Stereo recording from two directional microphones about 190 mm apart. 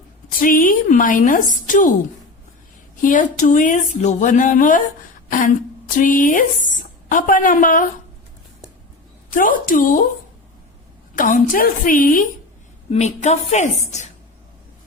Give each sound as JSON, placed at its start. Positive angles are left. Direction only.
{"t": 0.3, "sound": "a woman's voice", "side_deg": 45}
{"t": 3.0, "sound": "a woman's voice", "side_deg": 40}
{"t": 6.0, "sound": "a woman's voice", "side_deg": 45}
{"t": 9.3, "sound": "a woman's voice", "side_deg": 45}
{"t": 11.1, "sound": "a woman's voice", "side_deg": 45}